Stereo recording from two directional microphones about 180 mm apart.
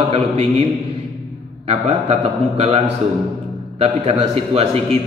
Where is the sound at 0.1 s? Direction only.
35° right (ahead or behind).